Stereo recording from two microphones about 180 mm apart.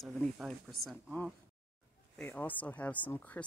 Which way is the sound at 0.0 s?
Centre (ahead or behind).